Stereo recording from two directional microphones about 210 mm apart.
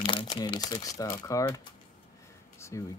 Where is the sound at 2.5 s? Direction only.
15° left (ahead or behind).